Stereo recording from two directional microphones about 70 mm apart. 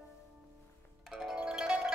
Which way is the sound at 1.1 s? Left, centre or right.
Centre.